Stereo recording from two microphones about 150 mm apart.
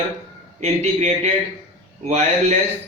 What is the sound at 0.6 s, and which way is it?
A man's voice, 45° right (ahead or behind).